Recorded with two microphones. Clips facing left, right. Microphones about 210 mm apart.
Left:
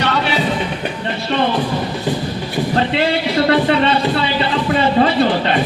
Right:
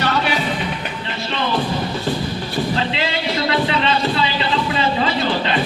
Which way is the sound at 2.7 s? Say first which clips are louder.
Left 6 dB; 50° left (ahead or behind).